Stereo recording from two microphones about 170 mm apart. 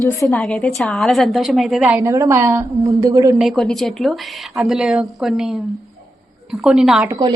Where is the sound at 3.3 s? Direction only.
Centre (ahead or behind).